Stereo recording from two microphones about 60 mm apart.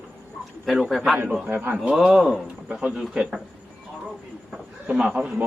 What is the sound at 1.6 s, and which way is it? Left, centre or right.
Speech, right.